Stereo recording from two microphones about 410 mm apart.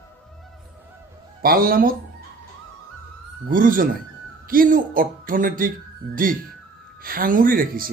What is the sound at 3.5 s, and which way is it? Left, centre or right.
Speech, centre.